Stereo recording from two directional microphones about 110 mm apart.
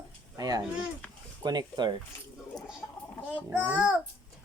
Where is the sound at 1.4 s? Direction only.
40° right (ahead or behind).